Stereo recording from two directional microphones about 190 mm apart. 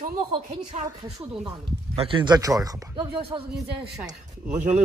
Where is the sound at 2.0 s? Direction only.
25° right (ahead or behind).